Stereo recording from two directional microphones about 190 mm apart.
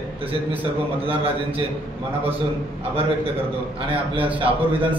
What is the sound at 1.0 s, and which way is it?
Speech, 30° right (ahead or behind).